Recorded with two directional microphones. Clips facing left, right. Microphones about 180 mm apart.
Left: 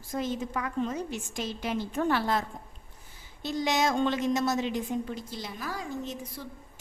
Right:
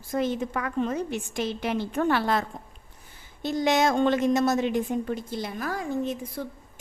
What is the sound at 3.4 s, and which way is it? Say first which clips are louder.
A woman's voice: right 5 dB; 55° right (ahead or behind).